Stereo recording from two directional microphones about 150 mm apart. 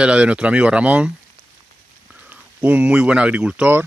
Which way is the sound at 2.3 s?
10° right (ahead or behind).